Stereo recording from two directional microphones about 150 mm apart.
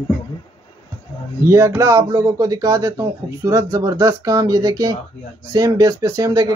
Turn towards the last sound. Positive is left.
turn(degrees=-25)  # may be behind; listen again after turning